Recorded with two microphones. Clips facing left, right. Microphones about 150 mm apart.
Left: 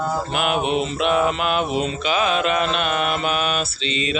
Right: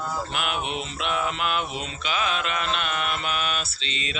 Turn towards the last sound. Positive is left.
turn(degrees=10)  # may be behind; listen again after turning